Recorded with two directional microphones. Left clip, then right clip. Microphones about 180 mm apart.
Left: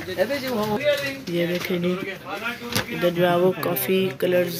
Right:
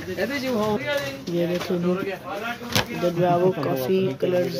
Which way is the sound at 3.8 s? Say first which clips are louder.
Left 2 dB; centre (ahead or behind).